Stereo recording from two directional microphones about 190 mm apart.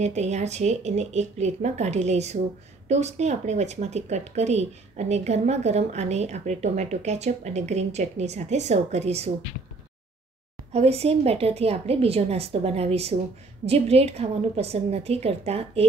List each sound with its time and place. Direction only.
0.0 s speech: 35° right (ahead or behind)
10.7 s speech: 35° right (ahead or behind)